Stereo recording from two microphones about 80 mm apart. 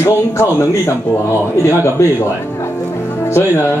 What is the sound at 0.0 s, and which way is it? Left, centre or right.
Speech, left.